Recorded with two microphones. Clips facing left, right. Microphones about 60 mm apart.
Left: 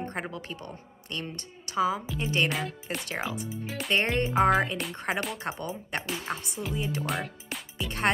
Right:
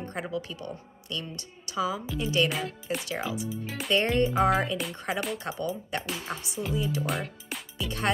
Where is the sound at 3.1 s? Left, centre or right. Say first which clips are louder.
Right 1 dB; left.